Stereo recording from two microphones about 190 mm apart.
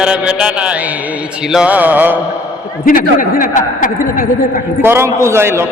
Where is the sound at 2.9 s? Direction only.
45° left (ahead or behind).